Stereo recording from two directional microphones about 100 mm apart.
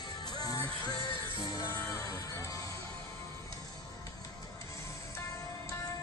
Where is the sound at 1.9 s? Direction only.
35° left (ahead or behind).